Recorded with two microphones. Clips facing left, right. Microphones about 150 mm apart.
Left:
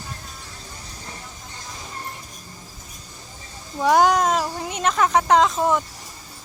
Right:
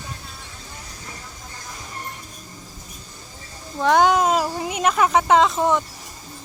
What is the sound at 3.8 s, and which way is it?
Speech, 5° left (ahead or behind).